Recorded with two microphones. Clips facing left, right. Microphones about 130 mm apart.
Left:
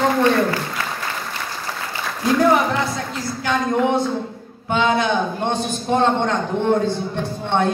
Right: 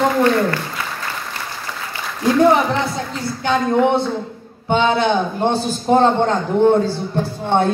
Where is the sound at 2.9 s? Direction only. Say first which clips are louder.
Right 2 dB; 30° right (ahead or behind).